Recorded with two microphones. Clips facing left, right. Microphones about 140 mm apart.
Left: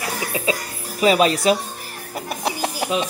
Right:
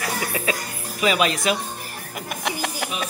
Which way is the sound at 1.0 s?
35° left (ahead or behind).